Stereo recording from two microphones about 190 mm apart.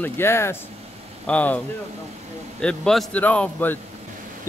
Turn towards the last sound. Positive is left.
turn(degrees=10)  # may be behind; listen again after turning